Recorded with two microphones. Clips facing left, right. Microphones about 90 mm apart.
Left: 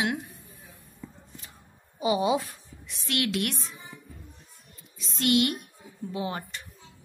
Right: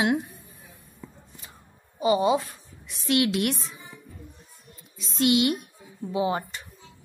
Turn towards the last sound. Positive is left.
turn(degrees=-10)  # may be behind; listen again after turning